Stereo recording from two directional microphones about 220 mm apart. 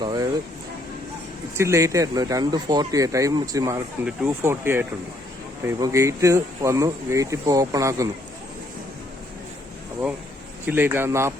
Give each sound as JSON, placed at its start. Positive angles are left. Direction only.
{"t": 0.0, "sound": "a sound", "side_deg": -20}
{"t": 1.5, "sound": "speech", "side_deg": -15}
{"t": 10.7, "sound": "speech", "side_deg": -10}